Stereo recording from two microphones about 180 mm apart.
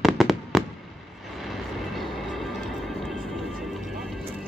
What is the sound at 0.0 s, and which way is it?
Fireworks, centre (ahead or behind).